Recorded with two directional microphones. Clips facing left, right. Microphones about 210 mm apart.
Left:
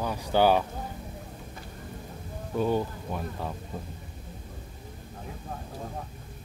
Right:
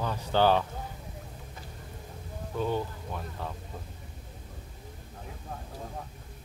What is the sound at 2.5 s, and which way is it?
Speech, 10° left (ahead or behind).